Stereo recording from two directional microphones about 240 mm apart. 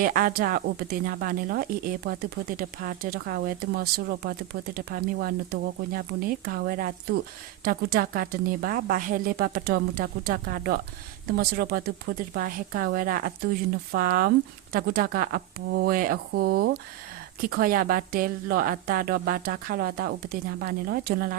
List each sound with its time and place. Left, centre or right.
0.0 s speech: right